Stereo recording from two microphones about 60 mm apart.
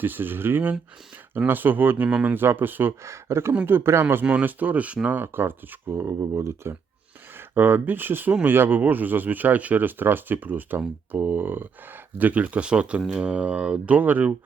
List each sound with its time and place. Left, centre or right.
0.0 s speech: right
2.0 s speech: right
2.3 s speech: right
3.0 s speech: right
4.1 s speech: right
6.0 s speech: right
7.3 s speech: right